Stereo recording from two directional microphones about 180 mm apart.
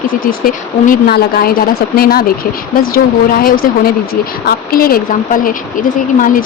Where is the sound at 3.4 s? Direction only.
55° left (ahead or behind).